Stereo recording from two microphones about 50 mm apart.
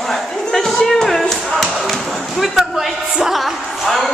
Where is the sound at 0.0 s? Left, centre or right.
Centre.